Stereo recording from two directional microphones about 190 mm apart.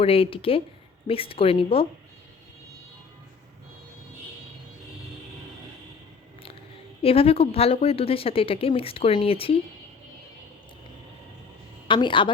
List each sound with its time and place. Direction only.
0.0 s speech: 30° left (ahead or behind)
7.0 s speech: 30° left (ahead or behind)
11.9 s speech: 25° left (ahead or behind)